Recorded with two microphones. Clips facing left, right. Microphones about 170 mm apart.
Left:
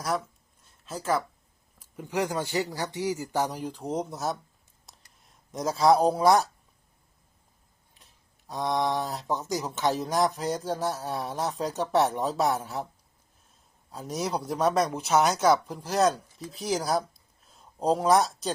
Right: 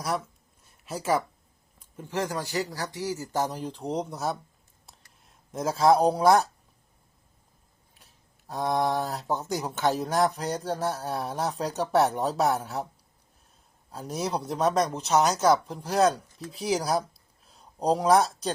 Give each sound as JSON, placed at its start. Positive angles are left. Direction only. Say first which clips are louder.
{"t": 0.9, "sound": "speech", "louder": "right 2 dB", "side_deg": -15}
{"t": 1.8, "sound": "speech", "louder": "left 2 dB", "side_deg": 15}
{"t": 7.9, "sound": "speech", "louder": "right 1 dB", "side_deg": 0}
{"t": 13.9, "sound": "speech", "louder": "even", "side_deg": 0}